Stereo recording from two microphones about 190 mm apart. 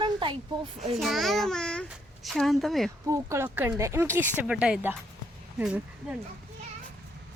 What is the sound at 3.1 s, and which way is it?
Speech, 15° right (ahead or behind).